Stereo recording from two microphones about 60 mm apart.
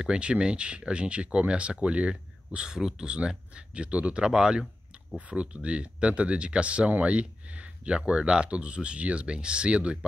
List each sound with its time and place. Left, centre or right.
0.0 s speech: centre